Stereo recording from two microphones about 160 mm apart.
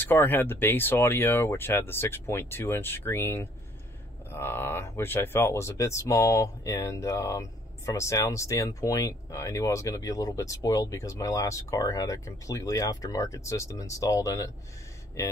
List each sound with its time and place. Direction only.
0.0 s speech: 10° left (ahead or behind)